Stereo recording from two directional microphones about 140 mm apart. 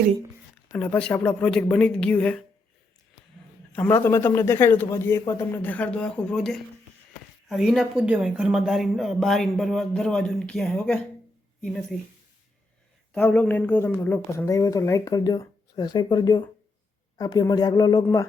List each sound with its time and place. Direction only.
0.8 s a man's voice: 10° left (ahead or behind)
3.8 s a man's voice: 15° left (ahead or behind)
5.6 s a man's voice: 10° left (ahead or behind)
13.1 s speech: 10° left (ahead or behind)